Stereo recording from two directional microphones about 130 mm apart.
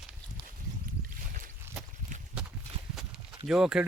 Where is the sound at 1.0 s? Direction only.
90° right.